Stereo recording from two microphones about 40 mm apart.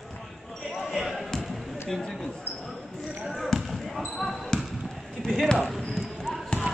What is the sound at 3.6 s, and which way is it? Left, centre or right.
Basketball bounce, centre.